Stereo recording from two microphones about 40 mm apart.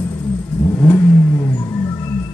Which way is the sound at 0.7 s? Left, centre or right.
Left.